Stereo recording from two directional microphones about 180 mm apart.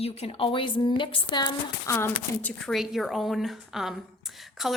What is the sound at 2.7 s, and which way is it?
A woman's voice, centre (ahead or behind).